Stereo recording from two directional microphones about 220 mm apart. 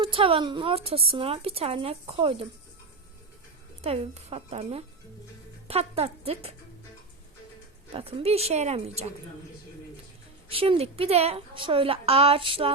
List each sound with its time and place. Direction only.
0.0 s speech: 25° right (ahead or behind)
3.8 s speech: 25° right (ahead or behind)
7.9 s speech: 25° right (ahead or behind)
10.5 s speech: 25° right (ahead or behind)